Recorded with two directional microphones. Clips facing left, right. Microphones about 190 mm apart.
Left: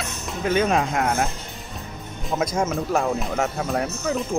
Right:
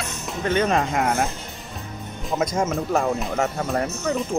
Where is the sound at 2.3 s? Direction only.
Centre (ahead or behind).